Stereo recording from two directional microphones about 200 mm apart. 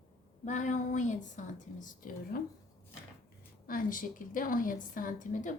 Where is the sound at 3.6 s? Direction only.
45° left (ahead or behind).